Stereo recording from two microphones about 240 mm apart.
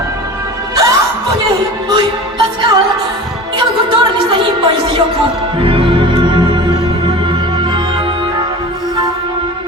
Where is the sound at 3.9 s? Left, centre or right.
Centre.